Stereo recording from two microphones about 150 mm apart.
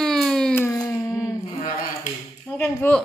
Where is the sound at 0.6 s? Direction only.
20° left (ahead or behind).